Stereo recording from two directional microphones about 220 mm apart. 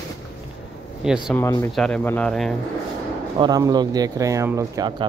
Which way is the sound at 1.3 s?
15° left (ahead or behind).